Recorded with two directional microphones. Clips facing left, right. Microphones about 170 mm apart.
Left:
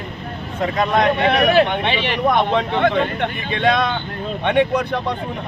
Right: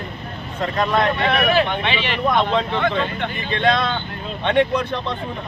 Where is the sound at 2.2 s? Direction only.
15° left (ahead or behind).